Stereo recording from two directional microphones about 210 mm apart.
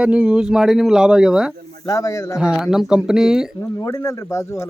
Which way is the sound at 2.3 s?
5° right (ahead or behind).